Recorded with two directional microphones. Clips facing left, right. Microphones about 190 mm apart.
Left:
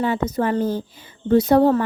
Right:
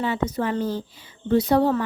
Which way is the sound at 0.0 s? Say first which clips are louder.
Left 3 dB; 45° left (ahead or behind).